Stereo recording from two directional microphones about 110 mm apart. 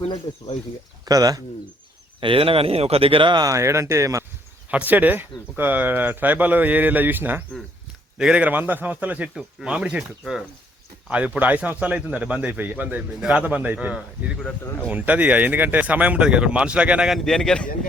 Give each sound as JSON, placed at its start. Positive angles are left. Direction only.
{"t": 0.0, "sound": "speech", "side_deg": 80}
{"t": 1.0, "sound": "speech", "side_deg": -35}
{"t": 2.2, "sound": "speech", "side_deg": -55}
{"t": 3.4, "sound": "speech", "side_deg": -25}
{"t": 4.7, "sound": "speech", "side_deg": -15}
{"t": 14.6, "sound": "speech", "side_deg": 20}
{"t": 14.8, "sound": "speech", "side_deg": -15}
{"t": 17.2, "sound": "a man's voice", "side_deg": 5}